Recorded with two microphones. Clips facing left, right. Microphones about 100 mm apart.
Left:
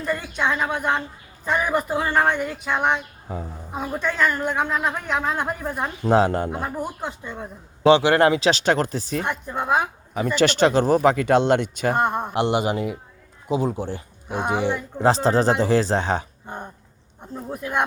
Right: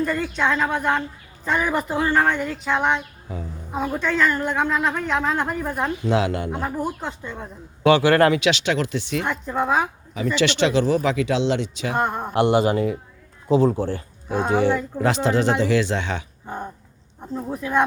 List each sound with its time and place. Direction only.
0.0 s a woman's voice: 15° left (ahead or behind)
3.3 s speech: 40° left (ahead or behind)
3.8 s a woman's voice: 10° left (ahead or behind)
6.0 s speech: 40° left (ahead or behind)
6.5 s speech: centre (ahead or behind)
7.9 s speech: 20° left (ahead or behind)
8.4 s speech: 40° left (ahead or behind)
9.2 s a woman's voice: 10° left (ahead or behind)
10.2 s speech: 45° left (ahead or behind)
12.1 s a woman's voice: 20° left (ahead or behind)
15.0 s speech: 35° left (ahead or behind)
17.5 s a woman's voice: 15° left (ahead or behind)